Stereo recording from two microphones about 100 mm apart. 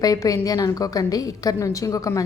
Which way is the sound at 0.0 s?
35° left (ahead or behind).